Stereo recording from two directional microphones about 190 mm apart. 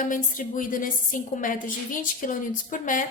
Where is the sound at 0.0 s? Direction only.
45° left (ahead or behind).